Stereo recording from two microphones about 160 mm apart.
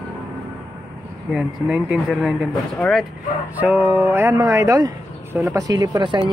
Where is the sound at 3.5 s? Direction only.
10° right (ahead or behind).